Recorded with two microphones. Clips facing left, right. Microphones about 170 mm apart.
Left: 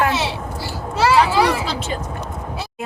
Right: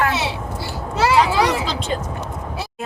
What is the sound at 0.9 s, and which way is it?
Children playing, 20° right (ahead or behind).